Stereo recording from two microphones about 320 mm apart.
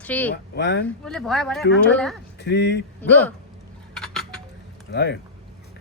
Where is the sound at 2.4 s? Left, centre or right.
Left.